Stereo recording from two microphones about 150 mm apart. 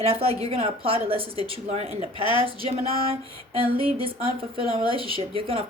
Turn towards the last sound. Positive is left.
turn(degrees=-40)  # may be behind; listen again after turning